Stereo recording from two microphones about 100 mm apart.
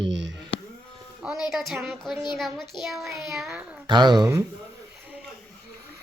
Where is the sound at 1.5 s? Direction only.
5° right (ahead or behind).